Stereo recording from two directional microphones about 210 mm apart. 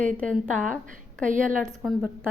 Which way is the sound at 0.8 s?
40° right (ahead or behind).